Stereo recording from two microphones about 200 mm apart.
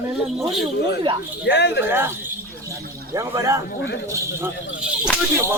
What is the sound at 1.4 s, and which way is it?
Speech, 60° left (ahead or behind).